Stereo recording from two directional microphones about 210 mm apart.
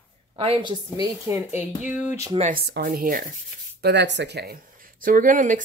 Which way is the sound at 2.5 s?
50° right (ahead or behind).